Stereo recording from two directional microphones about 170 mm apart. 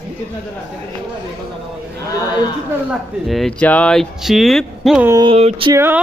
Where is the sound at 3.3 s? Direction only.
Centre (ahead or behind).